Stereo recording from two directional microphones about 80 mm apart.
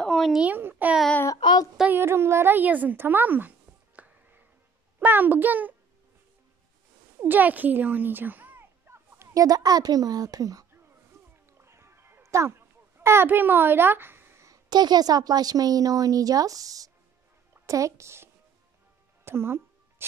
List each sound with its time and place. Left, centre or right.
0.0 s a sound: centre
0.3 s speech: centre
0.6 s a child's voice: right
1.4 s child singing: left
1.9 s a woman's voice: right
7.2 s a sound: right
9.3 s a woman's voice: right
11.6 s music: right
14.5 s a woman's voice: right
19.2 s music: right